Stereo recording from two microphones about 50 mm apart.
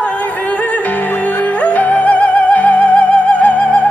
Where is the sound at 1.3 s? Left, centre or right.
Left.